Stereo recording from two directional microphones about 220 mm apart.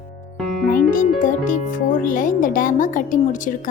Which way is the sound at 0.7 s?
40° left (ahead or behind).